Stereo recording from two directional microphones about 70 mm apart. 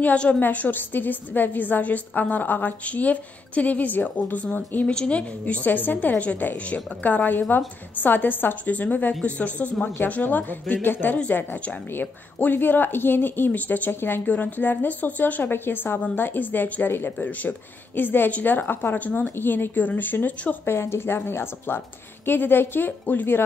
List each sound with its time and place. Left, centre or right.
0.0 s a woman's voice: centre
20.6 s a woman's voice: left